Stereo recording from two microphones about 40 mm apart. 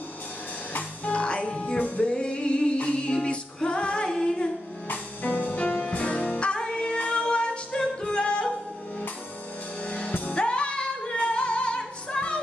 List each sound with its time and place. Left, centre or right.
0.7 s music: left
4.8 s music: left
9.8 s music: left